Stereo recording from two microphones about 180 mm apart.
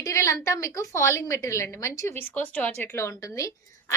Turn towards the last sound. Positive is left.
turn(degrees=15)  # may be behind; listen again after turning